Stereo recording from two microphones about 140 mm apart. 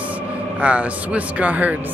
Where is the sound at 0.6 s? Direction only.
10° right (ahead or behind).